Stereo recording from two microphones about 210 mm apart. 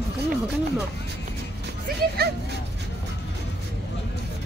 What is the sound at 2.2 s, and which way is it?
Speech, 50° right (ahead or behind).